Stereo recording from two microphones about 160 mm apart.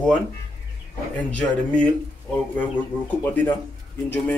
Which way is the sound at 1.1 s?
5° left (ahead or behind).